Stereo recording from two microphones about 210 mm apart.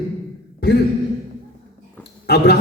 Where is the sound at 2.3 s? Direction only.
50° left (ahead or behind).